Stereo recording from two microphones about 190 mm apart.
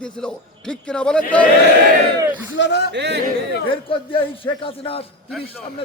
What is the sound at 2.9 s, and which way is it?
Speech, 65° right (ahead or behind).